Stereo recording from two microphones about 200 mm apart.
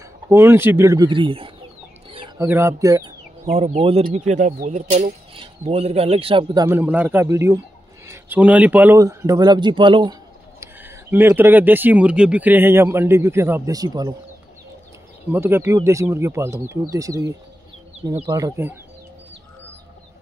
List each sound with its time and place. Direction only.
0.3 s speech: 10° right (ahead or behind)
2.0 s bird: 25° right (ahead or behind)
2.4 s speech: 15° right (ahead or behind)
3.4 s speech: 30° right (ahead or behind)
10.6 s speech: 10° right (ahead or behind)
15.3 s speech: 10° right (ahead or behind)